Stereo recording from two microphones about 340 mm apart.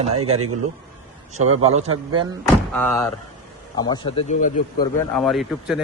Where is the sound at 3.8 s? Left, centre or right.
Centre.